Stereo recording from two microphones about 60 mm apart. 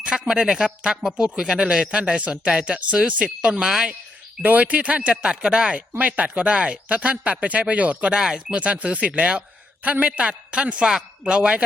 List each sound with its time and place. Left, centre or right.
0.0 s speech: centre
3.5 s speech: centre
4.4 s speech: right